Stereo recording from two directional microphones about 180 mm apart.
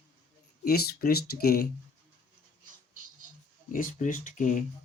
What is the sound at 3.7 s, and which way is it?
Speech, 50° left (ahead or behind).